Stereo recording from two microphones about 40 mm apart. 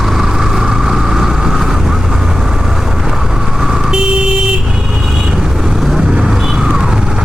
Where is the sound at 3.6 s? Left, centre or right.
Centre.